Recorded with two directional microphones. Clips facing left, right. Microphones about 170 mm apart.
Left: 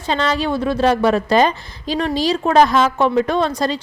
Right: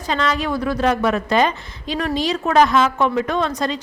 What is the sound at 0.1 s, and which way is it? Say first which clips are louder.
A woman's voice: left 2 dB; 30° left (ahead or behind).